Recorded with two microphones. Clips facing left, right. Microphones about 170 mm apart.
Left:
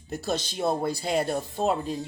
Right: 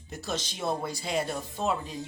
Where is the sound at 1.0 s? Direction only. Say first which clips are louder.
Left 3 dB; 55° left (ahead or behind).